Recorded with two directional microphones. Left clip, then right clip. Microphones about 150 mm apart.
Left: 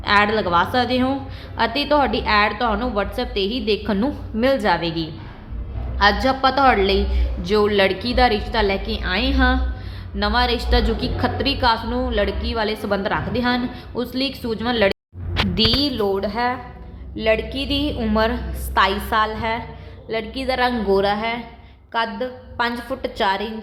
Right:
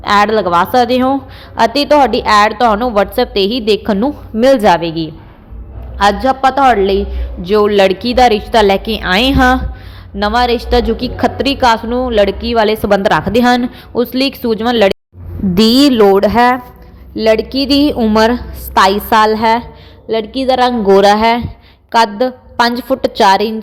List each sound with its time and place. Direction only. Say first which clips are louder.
0.0 s a woman's voice: right 7 dB; 40° right (ahead or behind)
10.2 s a woman's voice: right 8 dB; 40° right (ahead or behind)
15.5 s a woman's voice: right 11 dB; 60° right (ahead or behind)
20.1 s a woman's voice: right 10 dB; 40° right (ahead or behind); by 21.4 s 60° right (ahead or behind)
21.9 s a woman's voice: right 12 dB; 50° right (ahead or behind)